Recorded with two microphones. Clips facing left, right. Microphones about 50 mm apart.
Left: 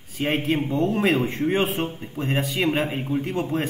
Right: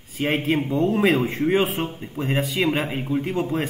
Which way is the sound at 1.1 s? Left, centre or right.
Right.